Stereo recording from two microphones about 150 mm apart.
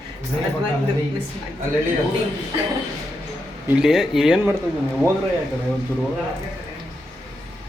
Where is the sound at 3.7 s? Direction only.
5° right (ahead or behind).